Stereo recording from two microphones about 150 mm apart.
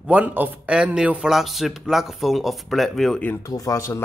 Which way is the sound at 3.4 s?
20° left (ahead or behind).